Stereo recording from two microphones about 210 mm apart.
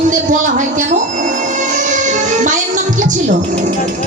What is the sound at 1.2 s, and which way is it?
Music, 35° right (ahead or behind).